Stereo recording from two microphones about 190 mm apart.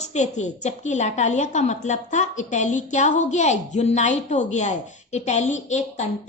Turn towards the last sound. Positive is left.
turn(degrees=35)  # may be behind; listen again after turning